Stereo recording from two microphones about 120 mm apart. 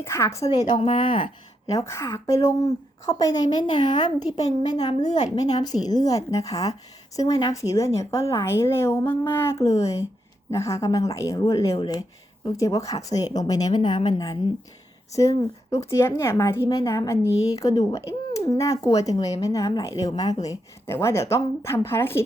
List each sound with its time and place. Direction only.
0.0 s a woman's voice: 25° left (ahead or behind)
0.4 s speech: 60° left (ahead or behind)
0.8 s speech: 45° left (ahead or behind)
1.6 s a woman's voice: 25° left (ahead or behind)
4.8 s a woman's voice: 65° left (ahead or behind)
5.5 s a woman's voice: 35° left (ahead or behind)
9.6 s speech: 65° left (ahead or behind)
10.5 s a woman's voice: 25° left (ahead or behind)